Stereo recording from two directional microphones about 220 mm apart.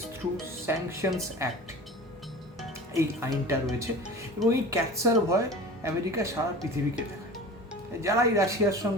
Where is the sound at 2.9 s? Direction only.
15° right (ahead or behind).